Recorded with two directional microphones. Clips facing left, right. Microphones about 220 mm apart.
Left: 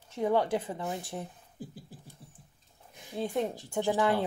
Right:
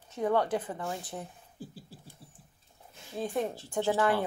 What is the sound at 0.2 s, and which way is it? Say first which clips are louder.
Speech: left 1 dB; 20° left (ahead or behind).